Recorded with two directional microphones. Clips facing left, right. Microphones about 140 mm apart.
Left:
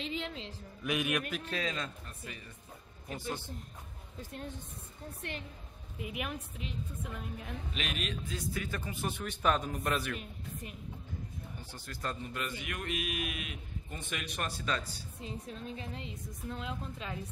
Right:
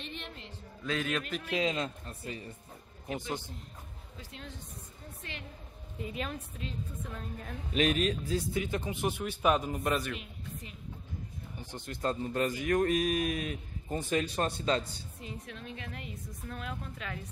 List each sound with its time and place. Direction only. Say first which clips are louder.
0.0 s a man's voice: left 5 dB; 90° left
0.8 s a woman's voice: even; 15° left (ahead or behind)
1.4 s a man's voice: right 5 dB; 20° right (ahead or behind)
3.2 s speech: even; 15° right (ahead or behind)
4.2 s speech: left 5 dB; 50° left (ahead or behind)
5.2 s a woman's voice: left 4 dB; 70° left (ahead or behind)
5.9 s a woman's voice: right 1 dB; 10° left (ahead or behind)
7.7 s a man's voice: right 12 dB; 40° right (ahead or behind)
8.5 s a man's voice: right 5 dB; 20° right (ahead or behind); by 10.1 s 5° right (ahead or behind)
11.6 s a man's voice: right 7 dB; 20° right (ahead or behind)
12.3 s a man's voice: right 10 dB; 40° right (ahead or behind)
15.2 s a woman's voice: left 2 dB; 35° left (ahead or behind)